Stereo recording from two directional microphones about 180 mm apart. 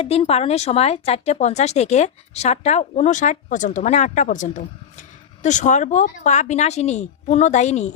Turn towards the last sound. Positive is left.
turn(degrees=40)  # may be behind; listen again after turning